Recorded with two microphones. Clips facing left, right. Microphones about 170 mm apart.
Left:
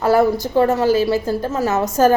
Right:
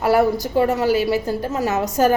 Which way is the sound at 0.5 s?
40° left (ahead or behind).